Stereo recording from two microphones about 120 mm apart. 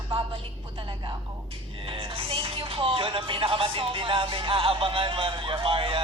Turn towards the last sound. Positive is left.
turn(degrees=-50)  # may be behind; listen again after turning